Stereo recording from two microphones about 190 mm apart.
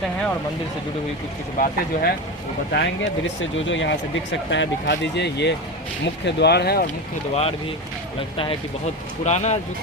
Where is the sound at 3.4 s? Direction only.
75° left (ahead or behind); by 6.8 s 60° left (ahead or behind).